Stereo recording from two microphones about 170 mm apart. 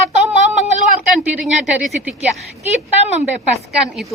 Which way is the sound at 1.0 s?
5° right (ahead or behind).